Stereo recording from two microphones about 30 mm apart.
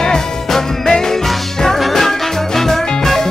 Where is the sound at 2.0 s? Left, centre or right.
Centre.